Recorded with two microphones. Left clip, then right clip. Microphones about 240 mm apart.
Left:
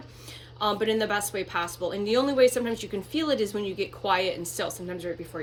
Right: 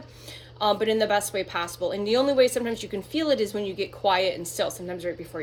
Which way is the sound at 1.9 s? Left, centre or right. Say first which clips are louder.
Right 2 dB; right.